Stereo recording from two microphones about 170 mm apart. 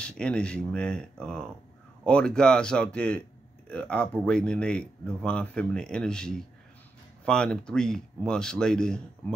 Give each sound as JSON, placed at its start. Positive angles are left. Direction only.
{"t": 0.0, "sound": "speech", "side_deg": 5}